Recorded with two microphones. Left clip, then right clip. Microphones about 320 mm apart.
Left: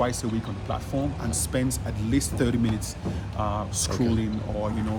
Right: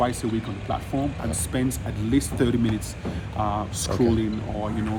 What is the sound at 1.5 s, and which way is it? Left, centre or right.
Speech, centre.